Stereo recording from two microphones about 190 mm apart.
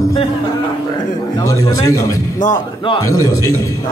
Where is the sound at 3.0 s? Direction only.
15° left (ahead or behind).